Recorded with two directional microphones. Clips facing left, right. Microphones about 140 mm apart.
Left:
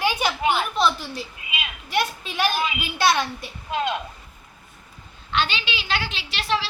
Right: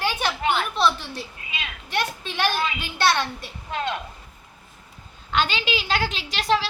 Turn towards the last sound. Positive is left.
turn(degrees=-45)  # may be behind; listen again after turning